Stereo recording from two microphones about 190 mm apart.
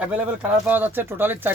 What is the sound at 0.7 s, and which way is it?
Speech, 10° right (ahead or behind).